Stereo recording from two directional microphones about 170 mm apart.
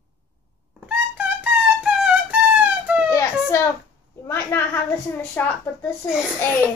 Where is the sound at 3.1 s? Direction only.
20° left (ahead or behind).